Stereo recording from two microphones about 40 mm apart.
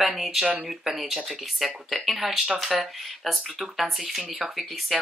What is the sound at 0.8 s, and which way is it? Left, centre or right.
Speech, centre.